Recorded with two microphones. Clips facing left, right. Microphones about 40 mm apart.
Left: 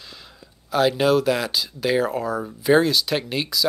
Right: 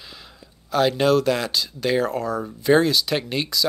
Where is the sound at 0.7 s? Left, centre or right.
Centre.